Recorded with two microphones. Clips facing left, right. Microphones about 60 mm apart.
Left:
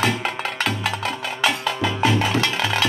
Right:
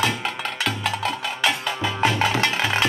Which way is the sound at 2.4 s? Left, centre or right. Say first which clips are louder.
Even; right.